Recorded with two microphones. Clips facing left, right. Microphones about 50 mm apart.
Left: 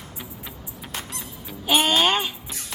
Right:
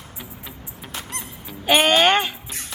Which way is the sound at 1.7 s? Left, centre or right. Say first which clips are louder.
Right 4 dB; right.